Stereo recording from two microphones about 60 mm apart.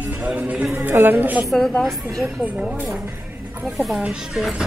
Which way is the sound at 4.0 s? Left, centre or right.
Centre.